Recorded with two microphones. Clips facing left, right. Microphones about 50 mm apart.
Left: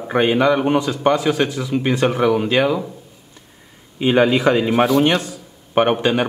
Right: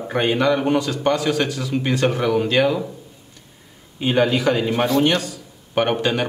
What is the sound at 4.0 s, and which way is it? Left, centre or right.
Speech, left.